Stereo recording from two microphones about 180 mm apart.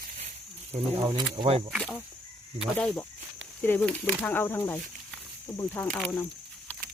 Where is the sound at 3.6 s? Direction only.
10° left (ahead or behind).